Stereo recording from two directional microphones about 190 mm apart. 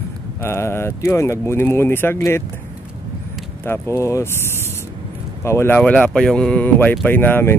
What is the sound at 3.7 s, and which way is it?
Speech, 15° left (ahead or behind).